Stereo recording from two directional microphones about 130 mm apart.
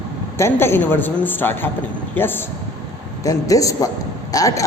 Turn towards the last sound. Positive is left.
turn(degrees=25)  # may be behind; listen again after turning